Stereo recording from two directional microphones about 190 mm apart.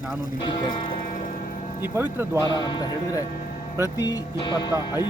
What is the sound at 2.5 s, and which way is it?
Speech, 25° left (ahead or behind).